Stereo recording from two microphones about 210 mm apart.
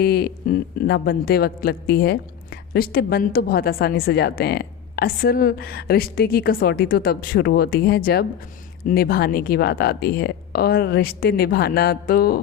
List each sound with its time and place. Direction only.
0.0 s a man's voice: 50° left (ahead or behind)